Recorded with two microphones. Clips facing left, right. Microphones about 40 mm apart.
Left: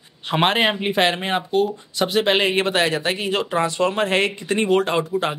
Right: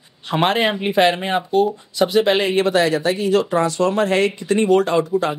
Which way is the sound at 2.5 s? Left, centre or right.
Left.